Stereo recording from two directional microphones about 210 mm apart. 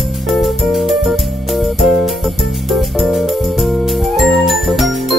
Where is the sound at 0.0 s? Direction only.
Centre (ahead or behind).